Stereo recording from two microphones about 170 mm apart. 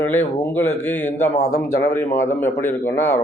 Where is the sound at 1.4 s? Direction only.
50° left (ahead or behind).